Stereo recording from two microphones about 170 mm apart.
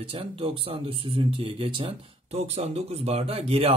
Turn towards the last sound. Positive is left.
turn(degrees=-35)  # may be behind; listen again after turning